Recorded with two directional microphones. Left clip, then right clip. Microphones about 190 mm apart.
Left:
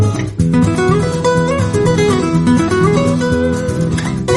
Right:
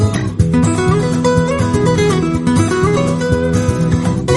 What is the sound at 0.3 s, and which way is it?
Music, centre (ahead or behind).